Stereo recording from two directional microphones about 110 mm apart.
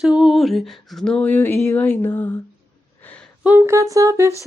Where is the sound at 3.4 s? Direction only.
15° right (ahead or behind).